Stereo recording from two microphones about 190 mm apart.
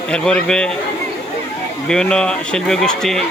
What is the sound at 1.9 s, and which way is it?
Speech, 5° left (ahead or behind).